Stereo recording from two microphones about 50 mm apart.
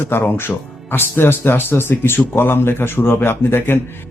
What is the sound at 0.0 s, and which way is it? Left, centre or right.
Speech, left.